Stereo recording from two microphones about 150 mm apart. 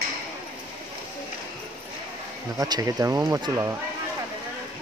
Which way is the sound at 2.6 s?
25° right (ahead or behind).